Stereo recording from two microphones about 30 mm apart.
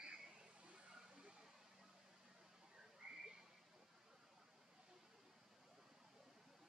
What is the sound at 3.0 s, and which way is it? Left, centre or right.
Frog, right.